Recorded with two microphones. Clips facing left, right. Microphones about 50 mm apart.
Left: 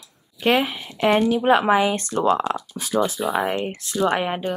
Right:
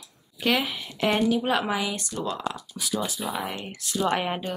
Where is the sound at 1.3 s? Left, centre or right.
Left.